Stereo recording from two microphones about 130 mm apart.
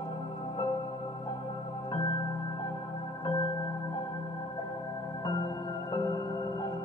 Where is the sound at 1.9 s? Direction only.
35° left (ahead or behind).